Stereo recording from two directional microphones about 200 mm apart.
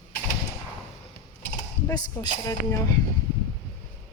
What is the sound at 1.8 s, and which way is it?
Speech, 15° left (ahead or behind).